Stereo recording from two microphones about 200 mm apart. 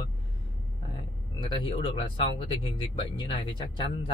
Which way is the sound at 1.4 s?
25° left (ahead or behind).